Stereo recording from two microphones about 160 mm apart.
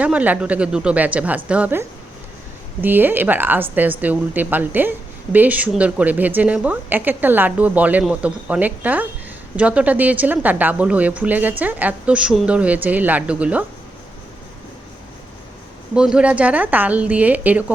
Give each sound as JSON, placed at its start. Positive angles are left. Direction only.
{"t": 0.0, "sound": "a woman's voice", "side_deg": -10}
{"t": 2.8, "sound": "a woman's voice", "side_deg": -10}
{"t": 16.0, "sound": "a woman's voice", "side_deg": -5}